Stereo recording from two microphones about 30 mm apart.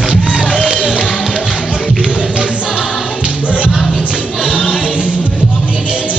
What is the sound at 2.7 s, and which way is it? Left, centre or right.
Music, right.